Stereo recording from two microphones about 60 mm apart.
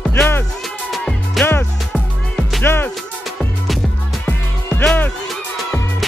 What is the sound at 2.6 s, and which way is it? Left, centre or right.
Music, left.